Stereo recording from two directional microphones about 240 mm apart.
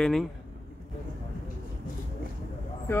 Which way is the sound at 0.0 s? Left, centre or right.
Centre.